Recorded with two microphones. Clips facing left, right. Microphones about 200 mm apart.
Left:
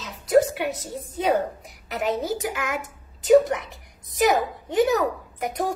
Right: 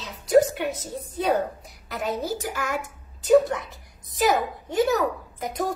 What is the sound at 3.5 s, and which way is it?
A woman's voice, 15° left (ahead or behind).